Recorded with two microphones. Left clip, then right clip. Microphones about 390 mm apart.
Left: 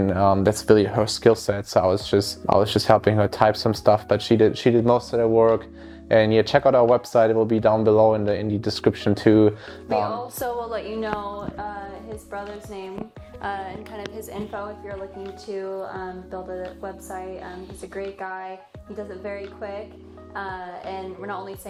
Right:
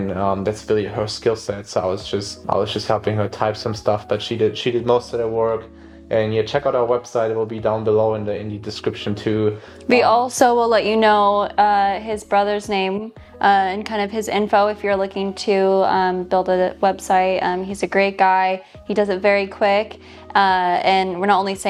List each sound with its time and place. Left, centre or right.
0.1 s speech: left
9.9 s a woman's voice: right
15.4 s a woman's voice: right